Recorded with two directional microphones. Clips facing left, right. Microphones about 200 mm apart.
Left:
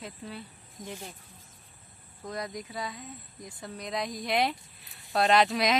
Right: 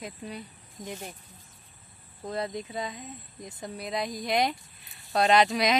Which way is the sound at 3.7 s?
5° right (ahead or behind).